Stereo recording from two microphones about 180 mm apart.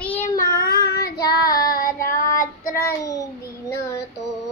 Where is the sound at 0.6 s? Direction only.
60° left (ahead or behind).